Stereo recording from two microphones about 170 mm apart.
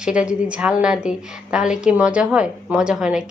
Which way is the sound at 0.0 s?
5° right (ahead or behind).